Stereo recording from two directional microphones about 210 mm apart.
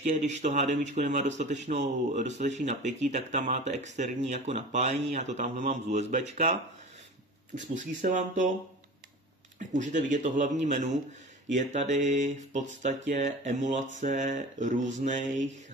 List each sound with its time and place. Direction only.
0.0 s speech: 35° right (ahead or behind)
9.6 s speech: 35° right (ahead or behind)